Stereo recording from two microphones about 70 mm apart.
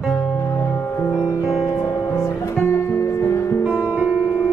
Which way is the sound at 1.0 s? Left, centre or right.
Left.